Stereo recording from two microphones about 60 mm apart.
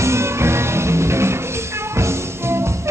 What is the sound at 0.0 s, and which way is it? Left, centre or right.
Music, right.